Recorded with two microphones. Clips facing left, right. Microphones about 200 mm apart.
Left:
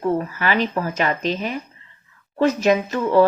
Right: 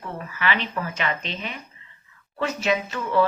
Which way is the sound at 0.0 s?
40° left (ahead or behind).